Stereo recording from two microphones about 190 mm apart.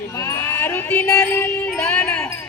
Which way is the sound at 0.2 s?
15° left (ahead or behind).